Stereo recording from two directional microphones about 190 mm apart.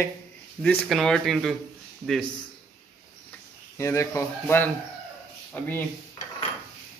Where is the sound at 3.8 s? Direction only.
15° left (ahead or behind).